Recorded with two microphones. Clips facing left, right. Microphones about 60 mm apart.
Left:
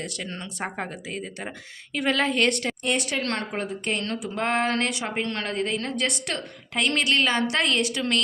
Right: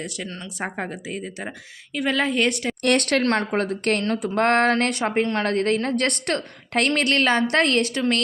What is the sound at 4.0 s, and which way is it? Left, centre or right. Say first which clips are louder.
Speech: right 6 dB; right.